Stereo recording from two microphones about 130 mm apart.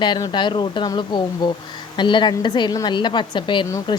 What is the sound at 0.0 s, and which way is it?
A woman's voice, 35° left (ahead or behind).